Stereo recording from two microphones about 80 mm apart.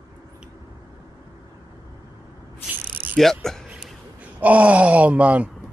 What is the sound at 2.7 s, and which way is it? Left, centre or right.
Cricket, right.